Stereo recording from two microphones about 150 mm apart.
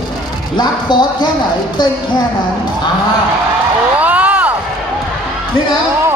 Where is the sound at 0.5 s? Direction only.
30° left (ahead or behind).